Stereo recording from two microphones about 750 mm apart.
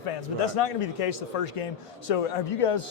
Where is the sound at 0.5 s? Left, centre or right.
Left.